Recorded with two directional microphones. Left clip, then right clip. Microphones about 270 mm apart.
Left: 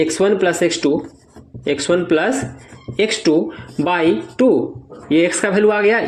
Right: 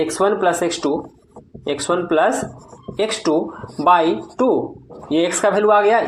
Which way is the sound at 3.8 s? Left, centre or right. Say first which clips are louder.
Right 2 dB; left.